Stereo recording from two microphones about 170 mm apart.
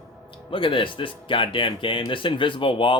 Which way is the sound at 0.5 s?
30° left (ahead or behind).